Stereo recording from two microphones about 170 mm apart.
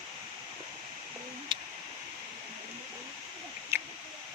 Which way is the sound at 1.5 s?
30° right (ahead or behind).